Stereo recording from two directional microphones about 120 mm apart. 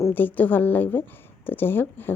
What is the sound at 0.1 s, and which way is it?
A woman's voice, 15° left (ahead or behind).